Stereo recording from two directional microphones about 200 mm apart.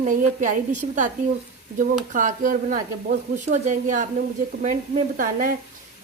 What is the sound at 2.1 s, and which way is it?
A woman's voice, 40° right (ahead or behind).